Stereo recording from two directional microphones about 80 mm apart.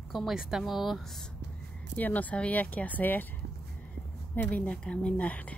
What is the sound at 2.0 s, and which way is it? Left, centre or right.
Speech, left.